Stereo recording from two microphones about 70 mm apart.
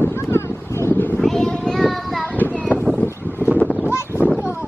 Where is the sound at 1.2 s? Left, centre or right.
Centre.